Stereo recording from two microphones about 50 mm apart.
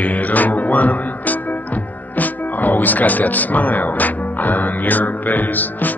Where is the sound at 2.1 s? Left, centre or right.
Left.